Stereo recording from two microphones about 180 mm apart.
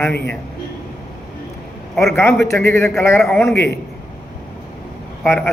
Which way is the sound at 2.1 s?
15° left (ahead or behind).